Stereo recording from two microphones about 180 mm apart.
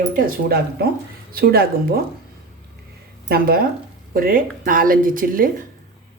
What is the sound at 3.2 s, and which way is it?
Speech, 55° right (ahead or behind).